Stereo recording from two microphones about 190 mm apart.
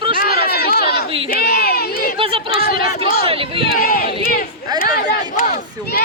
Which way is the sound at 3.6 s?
50° left (ahead or behind).